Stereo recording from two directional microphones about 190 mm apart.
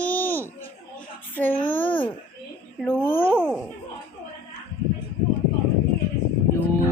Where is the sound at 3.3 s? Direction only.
10° right (ahead or behind).